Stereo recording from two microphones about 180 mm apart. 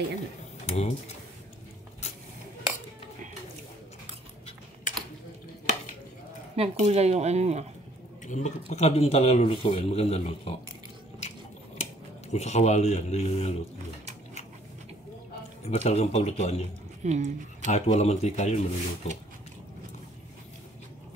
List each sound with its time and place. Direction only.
0.7 s speech: 35° left (ahead or behind)
6.5 s speech: 35° right (ahead or behind)
8.3 s speech: 40° left (ahead or behind)
11.8 s speech: 40° left (ahead or behind)
15.7 s speech: 40° left (ahead or behind)
17.0 s speech: 40° right (ahead or behind)
17.6 s speech: 40° left (ahead or behind)